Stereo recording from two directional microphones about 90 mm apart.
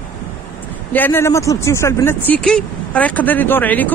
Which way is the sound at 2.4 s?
10° left (ahead or behind).